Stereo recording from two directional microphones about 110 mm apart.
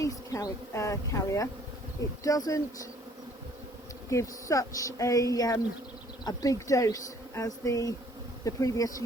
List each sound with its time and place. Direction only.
0.0 s speech: 30° left (ahead or behind)
4.1 s speech: 30° left (ahead or behind)